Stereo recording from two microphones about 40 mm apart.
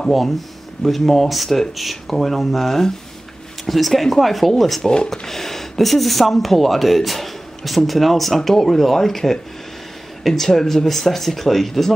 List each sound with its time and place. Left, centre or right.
0.8 s speech: centre
4.8 s speech: centre
5.2 s speech: centre